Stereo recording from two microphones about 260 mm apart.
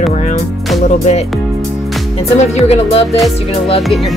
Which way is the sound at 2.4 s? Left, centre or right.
Left.